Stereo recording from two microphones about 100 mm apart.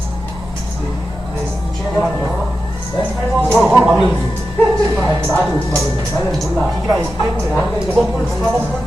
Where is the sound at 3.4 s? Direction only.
5° left (ahead or behind).